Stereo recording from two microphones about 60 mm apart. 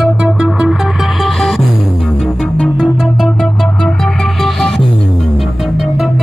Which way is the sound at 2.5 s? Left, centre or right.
Centre.